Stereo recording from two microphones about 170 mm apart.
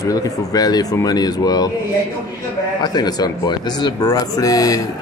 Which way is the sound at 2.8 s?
25° left (ahead or behind).